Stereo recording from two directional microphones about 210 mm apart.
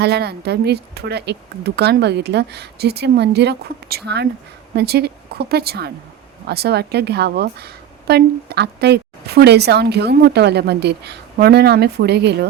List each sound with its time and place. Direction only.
0.0 s a woman's voice: 50° right (ahead or behind)